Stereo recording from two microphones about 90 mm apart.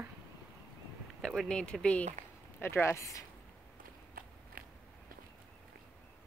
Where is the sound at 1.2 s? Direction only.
5° left (ahead or behind).